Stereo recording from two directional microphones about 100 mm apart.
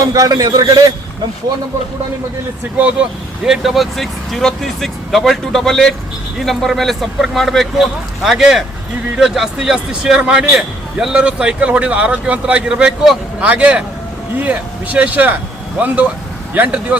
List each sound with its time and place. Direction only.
0.0 s a man's voice: 35° right (ahead or behind)
2.8 s a man's voice: 10° right (ahead or behind)
16.6 s a man's voice: 15° right (ahead or behind)